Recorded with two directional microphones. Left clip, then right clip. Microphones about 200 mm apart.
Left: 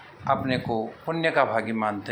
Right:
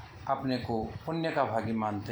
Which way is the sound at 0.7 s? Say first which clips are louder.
Left 5 dB; 25° left (ahead or behind).